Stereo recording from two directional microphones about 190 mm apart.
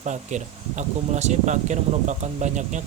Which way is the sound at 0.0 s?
40° right (ahead or behind).